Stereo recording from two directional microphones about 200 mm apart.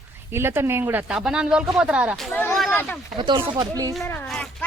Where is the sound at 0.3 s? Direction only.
10° right (ahead or behind).